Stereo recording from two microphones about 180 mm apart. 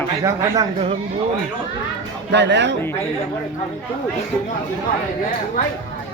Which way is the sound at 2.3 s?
75° right (ahead or behind).